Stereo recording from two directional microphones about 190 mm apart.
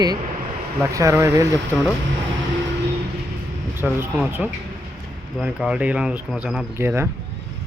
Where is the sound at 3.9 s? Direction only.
10° right (ahead or behind).